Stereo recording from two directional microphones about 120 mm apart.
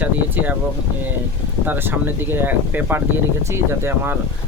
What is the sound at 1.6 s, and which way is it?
Speech, 15° right (ahead or behind).